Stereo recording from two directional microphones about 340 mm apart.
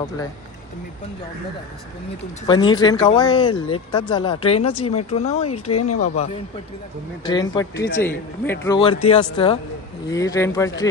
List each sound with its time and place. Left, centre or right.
2.4 s speech: centre
5.7 s speech: left
7.2 s speech: centre